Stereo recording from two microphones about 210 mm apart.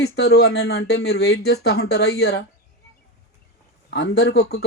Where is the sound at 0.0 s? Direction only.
50° left (ahead or behind).